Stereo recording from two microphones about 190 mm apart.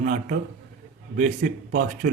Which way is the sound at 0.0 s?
45° right (ahead or behind).